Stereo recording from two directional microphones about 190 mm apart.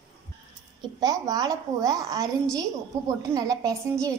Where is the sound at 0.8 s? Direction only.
20° right (ahead or behind).